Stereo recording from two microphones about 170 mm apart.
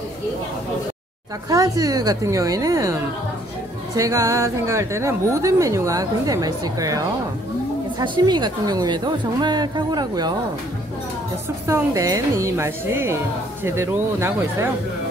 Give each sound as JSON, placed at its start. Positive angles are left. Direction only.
{"t": 1.5, "sound": "a woman's voice", "side_deg": -20}
{"t": 8.0, "sound": "a woman's voice", "side_deg": -25}
{"t": 11.6, "sound": "a woman's voice", "side_deg": -15}